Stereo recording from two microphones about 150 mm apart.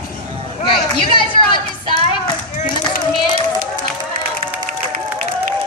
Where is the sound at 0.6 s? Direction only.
30° left (ahead or behind).